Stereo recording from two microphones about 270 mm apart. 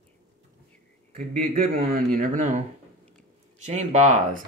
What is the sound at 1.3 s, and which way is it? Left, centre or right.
Speech, right.